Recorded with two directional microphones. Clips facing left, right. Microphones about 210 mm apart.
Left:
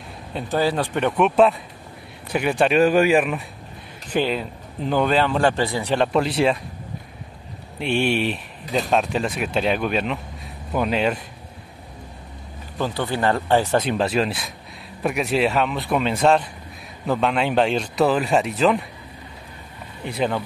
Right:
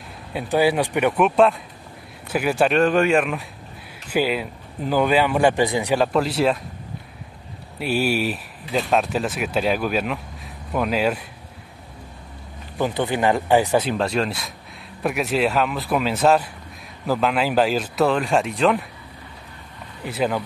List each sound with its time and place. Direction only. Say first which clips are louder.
0.3 s speech: right 3 dB; 10° right (ahead or behind)
2.8 s speech: left 4 dB; 5° left (ahead or behind)
4.1 s speech: right 1 dB; 10° right (ahead or behind)
5.9 s speech: left 2 dB; centre (ahead or behind)
7.8 s speech: even; 5° right (ahead or behind)
8.6 s speech: even; 40° left (ahead or behind)
8.9 s speech: even; 5° right (ahead or behind)
12.7 s speech: right 2 dB; 15° right (ahead or behind)
13.8 s speech: left 1 dB; centre (ahead or behind)
20.1 s speech: even; 5° right (ahead or behind)